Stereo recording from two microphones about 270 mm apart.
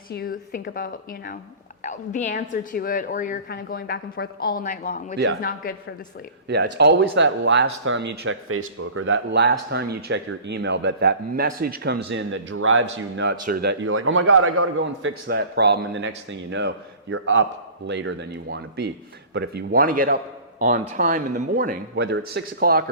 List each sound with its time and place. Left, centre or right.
0.1 s a woman's voice: left
6.7 s speech: right
13.4 s a man's voice: right
15.3 s speech: right